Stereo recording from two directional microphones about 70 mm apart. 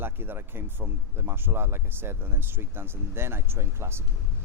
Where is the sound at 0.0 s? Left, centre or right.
Right.